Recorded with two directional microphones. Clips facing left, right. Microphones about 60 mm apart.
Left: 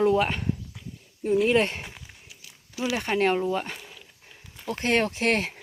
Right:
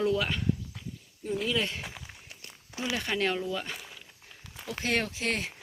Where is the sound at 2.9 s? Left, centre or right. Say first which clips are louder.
Left 6 dB; left.